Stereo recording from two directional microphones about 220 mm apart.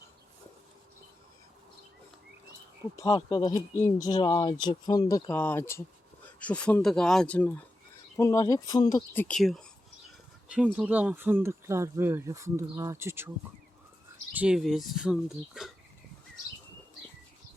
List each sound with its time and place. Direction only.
3.1 s speech: 20° left (ahead or behind)
9.2 s speech: centre (ahead or behind)
14.3 s speech: 5° right (ahead or behind)